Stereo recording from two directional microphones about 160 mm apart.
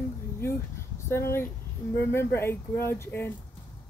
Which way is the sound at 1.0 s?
15° left (ahead or behind).